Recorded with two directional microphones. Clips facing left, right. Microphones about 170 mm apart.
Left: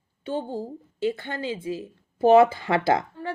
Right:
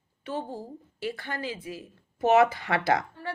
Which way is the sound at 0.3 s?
30° left (ahead or behind).